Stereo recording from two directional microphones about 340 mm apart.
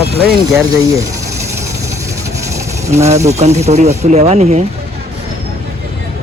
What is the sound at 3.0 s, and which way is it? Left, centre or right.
Speech, centre.